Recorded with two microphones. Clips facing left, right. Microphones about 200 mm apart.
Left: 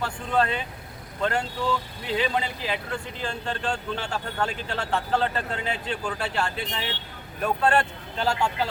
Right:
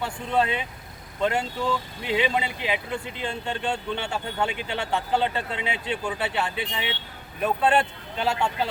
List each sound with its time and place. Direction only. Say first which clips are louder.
0.0 s speech: even; 5° right (ahead or behind)